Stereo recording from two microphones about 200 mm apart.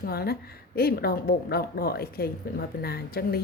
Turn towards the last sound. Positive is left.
turn(degrees=50)  # may be behind; listen again after turning